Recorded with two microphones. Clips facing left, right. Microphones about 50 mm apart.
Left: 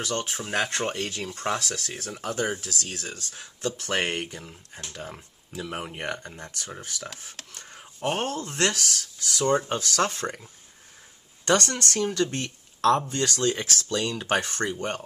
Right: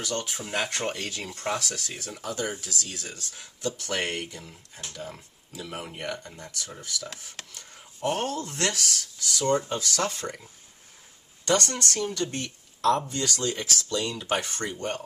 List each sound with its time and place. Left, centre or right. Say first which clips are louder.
0.0 s speech: left 2 dB; left
5.7 s speech: left 1 dB; left
11.4 s speech: left 2 dB; left